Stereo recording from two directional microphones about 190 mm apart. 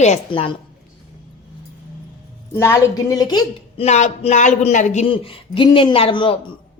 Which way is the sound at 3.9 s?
40° left (ahead or behind).